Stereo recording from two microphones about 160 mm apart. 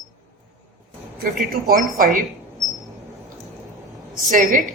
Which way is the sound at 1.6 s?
55° right (ahead or behind).